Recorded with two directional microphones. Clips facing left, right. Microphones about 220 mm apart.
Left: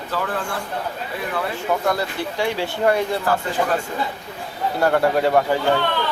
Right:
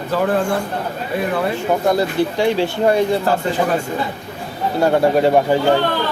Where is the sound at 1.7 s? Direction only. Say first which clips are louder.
Right 4 dB; 25° right (ahead or behind).